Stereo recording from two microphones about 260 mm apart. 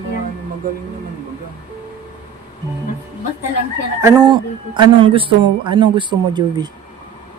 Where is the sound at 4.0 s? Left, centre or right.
Centre.